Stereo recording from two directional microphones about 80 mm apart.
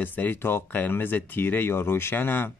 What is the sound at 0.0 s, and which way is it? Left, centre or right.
Speech, left.